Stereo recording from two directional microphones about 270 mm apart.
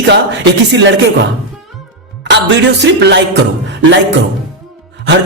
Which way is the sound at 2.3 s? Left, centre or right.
Right.